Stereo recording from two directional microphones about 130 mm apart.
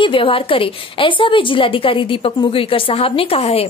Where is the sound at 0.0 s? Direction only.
40° left (ahead or behind).